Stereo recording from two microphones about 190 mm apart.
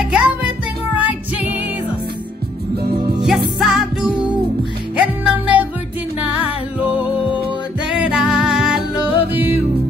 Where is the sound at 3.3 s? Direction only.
Centre (ahead or behind).